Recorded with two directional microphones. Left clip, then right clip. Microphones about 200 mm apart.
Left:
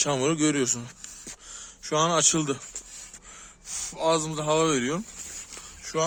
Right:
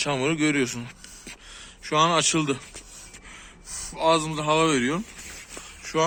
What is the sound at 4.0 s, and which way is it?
Speech, 55° left (ahead or behind).